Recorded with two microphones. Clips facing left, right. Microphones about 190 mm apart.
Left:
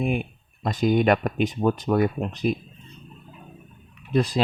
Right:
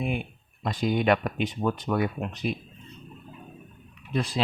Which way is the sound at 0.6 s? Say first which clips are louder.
Left 5 dB; 45° left (ahead or behind).